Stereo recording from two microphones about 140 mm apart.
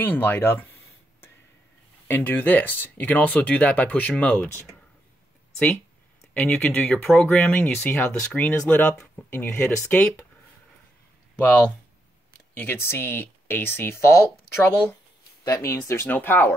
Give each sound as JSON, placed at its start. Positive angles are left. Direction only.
{"t": 0.0, "sound": "a sound", "side_deg": 15}
{"t": 2.0, "sound": "speech", "side_deg": 15}
{"t": 6.3, "sound": "speech", "side_deg": 10}
{"t": 12.5, "sound": "speech", "side_deg": 15}